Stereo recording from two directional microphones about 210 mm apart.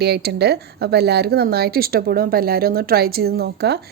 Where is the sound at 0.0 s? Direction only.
50° right (ahead or behind).